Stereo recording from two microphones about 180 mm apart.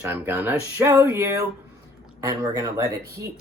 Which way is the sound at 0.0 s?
15° right (ahead or behind).